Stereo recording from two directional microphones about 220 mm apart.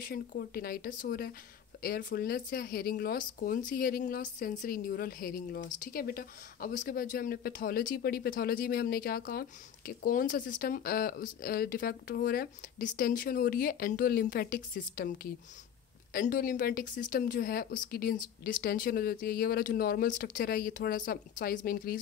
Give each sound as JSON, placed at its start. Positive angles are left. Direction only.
{"t": 0.0, "sound": "speech", "side_deg": 40}